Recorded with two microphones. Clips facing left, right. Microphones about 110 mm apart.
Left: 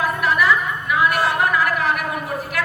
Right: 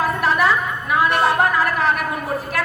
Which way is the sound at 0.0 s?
30° right (ahead or behind).